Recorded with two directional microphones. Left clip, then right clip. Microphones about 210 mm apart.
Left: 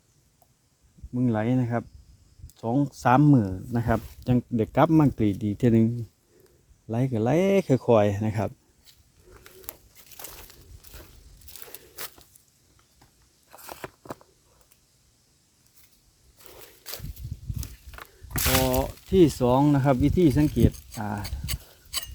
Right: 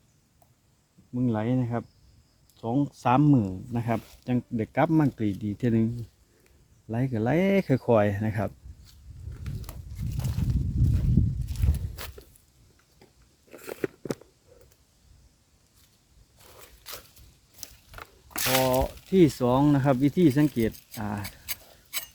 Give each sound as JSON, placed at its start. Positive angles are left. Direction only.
{"t": 1.1, "sound": "speech", "side_deg": 30}
{"t": 6.8, "sound": "speech", "side_deg": 15}
{"t": 10.2, "sound": "a sound", "side_deg": 25}
{"t": 12.0, "sound": "walk", "side_deg": 15}
{"t": 16.4, "sound": "crunch", "side_deg": 20}
{"t": 17.9, "sound": "a sound", "side_deg": 0}
{"t": 21.0, "sound": "speech", "side_deg": 5}